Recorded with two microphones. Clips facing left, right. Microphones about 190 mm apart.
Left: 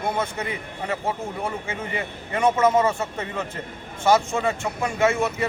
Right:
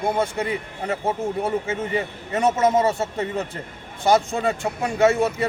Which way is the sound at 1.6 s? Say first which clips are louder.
Right 5 dB; 40° right (ahead or behind).